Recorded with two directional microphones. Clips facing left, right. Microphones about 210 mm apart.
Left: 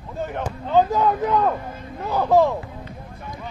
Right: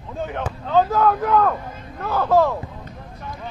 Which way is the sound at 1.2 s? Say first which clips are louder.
Right 2 dB; 15° left (ahead or behind).